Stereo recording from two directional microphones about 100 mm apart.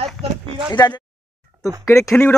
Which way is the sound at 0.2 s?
75° right (ahead or behind).